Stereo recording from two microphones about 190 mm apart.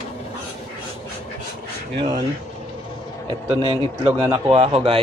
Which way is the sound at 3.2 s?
25° right (ahead or behind).